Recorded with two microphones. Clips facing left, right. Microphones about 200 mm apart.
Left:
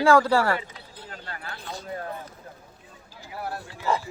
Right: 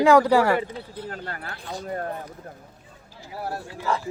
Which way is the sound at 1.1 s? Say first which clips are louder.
Right 5 dB; 50° right (ahead or behind).